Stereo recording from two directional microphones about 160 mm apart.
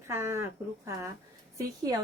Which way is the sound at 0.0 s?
15° right (ahead or behind).